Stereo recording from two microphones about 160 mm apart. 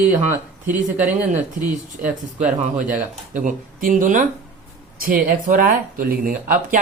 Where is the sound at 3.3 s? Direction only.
55° right (ahead or behind).